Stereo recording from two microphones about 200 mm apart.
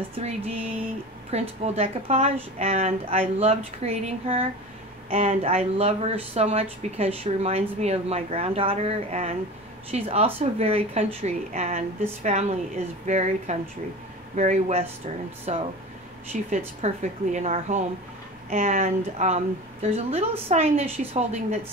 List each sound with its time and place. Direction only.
0.2 s speech: 35° right (ahead or behind)
1.6 s speech: 30° right (ahead or behind)